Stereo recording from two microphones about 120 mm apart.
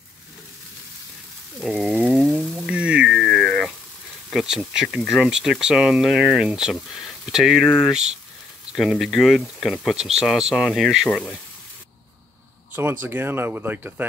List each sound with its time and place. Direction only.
1.6 s a sound: centre (ahead or behind)
4.3 s speech: 5° right (ahead or behind)
11.1 s speech: 10° left (ahead or behind)
12.7 s speech: 15° right (ahead or behind)